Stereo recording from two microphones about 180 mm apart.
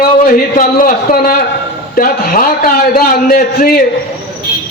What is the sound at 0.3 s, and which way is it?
A man's voice, 50° left (ahead or behind).